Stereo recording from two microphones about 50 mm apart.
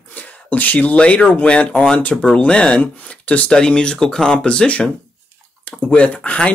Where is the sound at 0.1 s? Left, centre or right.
Left.